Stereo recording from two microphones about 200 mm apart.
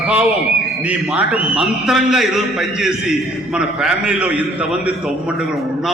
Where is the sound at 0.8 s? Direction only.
5° right (ahead or behind).